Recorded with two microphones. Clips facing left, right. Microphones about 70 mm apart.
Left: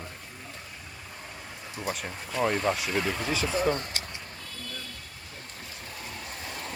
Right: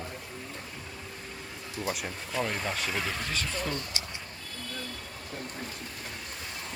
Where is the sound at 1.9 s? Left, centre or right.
Centre.